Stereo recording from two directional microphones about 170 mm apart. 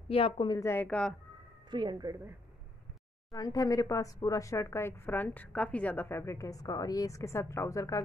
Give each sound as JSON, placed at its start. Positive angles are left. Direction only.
{"t": 0.1, "sound": "speech", "side_deg": 30}
{"t": 0.6, "sound": "a woman's voice", "side_deg": 15}
{"t": 1.7, "sound": "a woman's voice", "side_deg": -25}
{"t": 3.3, "sound": "a woman's voice", "side_deg": 20}